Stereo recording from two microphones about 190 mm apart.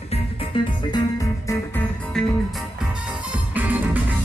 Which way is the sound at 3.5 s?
10° right (ahead or behind).